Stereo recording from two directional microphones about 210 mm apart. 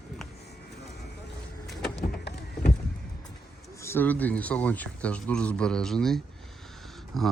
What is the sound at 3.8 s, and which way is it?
Speech, 10° left (ahead or behind).